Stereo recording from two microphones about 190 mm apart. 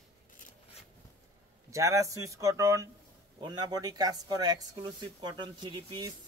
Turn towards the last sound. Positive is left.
turn(degrees=-20)  # may be behind; listen again after turning